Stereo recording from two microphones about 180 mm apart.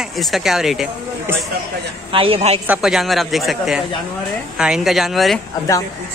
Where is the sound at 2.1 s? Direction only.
30° right (ahead or behind).